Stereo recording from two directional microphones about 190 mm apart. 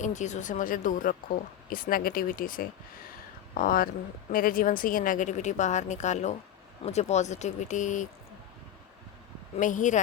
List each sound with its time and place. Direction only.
0.0 s speech: 40° left (ahead or behind)
9.6 s speech: 40° left (ahead or behind)